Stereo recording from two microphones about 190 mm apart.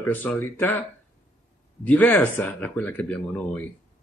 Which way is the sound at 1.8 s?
10° left (ahead or behind).